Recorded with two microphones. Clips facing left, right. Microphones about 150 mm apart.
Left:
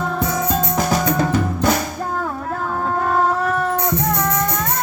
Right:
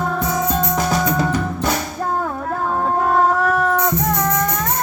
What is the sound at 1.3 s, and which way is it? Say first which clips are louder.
Drum: left 2 dB; 5° left (ahead or behind).